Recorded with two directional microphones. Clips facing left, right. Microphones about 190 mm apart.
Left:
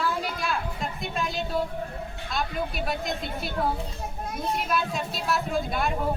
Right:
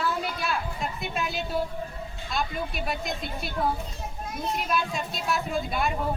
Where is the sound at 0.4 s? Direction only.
Centre (ahead or behind).